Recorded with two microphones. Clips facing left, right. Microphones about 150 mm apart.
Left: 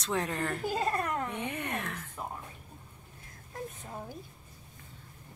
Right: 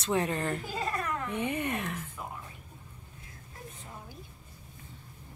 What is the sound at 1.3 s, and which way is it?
Speech, 5° right (ahead or behind).